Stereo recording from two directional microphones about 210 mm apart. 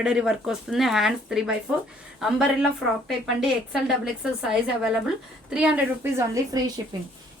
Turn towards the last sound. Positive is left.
turn(degrees=-20)  # may be behind; listen again after turning